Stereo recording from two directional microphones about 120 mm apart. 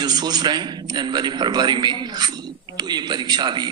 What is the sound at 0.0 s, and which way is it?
A man's voice, 35° right (ahead or behind).